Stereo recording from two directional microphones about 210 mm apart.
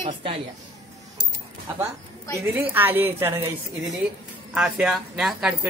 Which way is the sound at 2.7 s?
10° right (ahead or behind).